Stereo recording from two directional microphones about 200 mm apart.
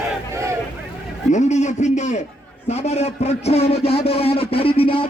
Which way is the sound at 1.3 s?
35° left (ahead or behind).